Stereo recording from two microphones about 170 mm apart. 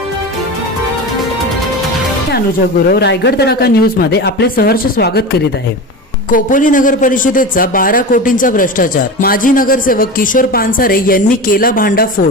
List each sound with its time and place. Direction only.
2.9 s speech: 80° left
6.3 s speech: 50° left (ahead or behind)